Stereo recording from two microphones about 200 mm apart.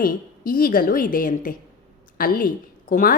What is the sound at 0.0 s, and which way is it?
A woman's voice, 45° left (ahead or behind).